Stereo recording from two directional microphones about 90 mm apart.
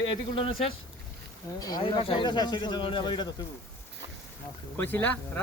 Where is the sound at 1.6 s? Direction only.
45° left (ahead or behind).